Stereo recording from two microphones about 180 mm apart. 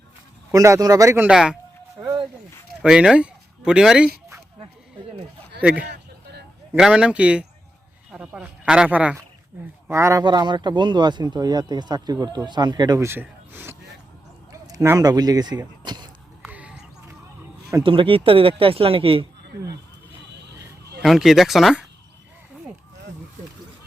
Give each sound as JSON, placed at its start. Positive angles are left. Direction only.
{"t": 0.5, "sound": "speech", "side_deg": -20}
{"t": 1.3, "sound": "speech", "side_deg": -5}
{"t": 2.8, "sound": "speech", "side_deg": -5}
{"t": 5.9, "sound": "a sound", "side_deg": -70}
{"t": 6.7, "sound": "speech", "side_deg": -5}
{"t": 16.4, "sound": "a sound", "side_deg": -5}
{"t": 17.8, "sound": "speech", "side_deg": -30}
{"t": 21.0, "sound": "speech", "side_deg": 0}